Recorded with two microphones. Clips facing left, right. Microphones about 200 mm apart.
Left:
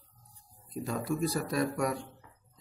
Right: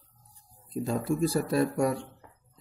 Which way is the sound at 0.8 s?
30° right (ahead or behind).